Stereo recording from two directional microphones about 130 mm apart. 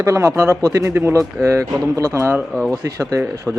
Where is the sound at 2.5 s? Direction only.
Centre (ahead or behind).